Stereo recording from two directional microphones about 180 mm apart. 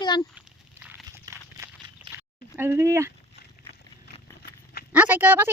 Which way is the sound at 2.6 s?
15° right (ahead or behind).